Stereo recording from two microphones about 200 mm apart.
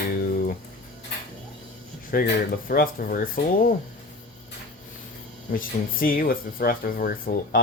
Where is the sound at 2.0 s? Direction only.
50° left (ahead or behind).